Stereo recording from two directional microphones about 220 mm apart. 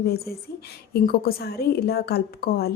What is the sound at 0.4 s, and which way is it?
A woman's voice, 45° left (ahead or behind).